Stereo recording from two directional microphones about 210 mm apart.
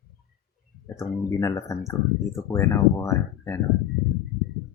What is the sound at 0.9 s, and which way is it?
Speech, 15° left (ahead or behind).